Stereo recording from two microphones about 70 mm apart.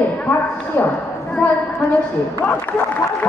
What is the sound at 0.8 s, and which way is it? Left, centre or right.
Speech, left.